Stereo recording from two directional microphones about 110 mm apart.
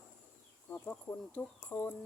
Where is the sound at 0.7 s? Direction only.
15° left (ahead or behind).